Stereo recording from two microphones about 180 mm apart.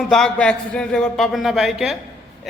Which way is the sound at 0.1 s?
5° left (ahead or behind).